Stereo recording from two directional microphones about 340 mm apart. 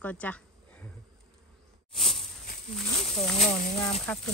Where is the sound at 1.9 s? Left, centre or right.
Centre.